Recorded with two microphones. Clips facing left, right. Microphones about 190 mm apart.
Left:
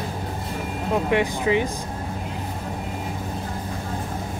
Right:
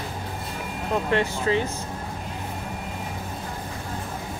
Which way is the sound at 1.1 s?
15° left (ahead or behind).